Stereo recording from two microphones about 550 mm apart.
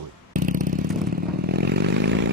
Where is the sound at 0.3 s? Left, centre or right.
Centre.